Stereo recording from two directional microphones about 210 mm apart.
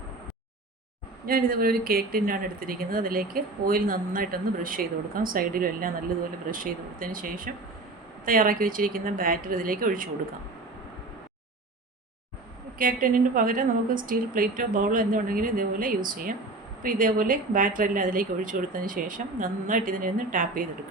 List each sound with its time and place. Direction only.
1.2 s speech: 45° right (ahead or behind)
12.8 s speech: 40° right (ahead or behind)